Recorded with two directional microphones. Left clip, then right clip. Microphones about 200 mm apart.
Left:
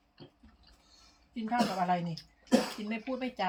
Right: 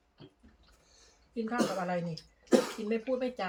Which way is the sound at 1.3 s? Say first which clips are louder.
Left 1 dB; 15° right (ahead or behind).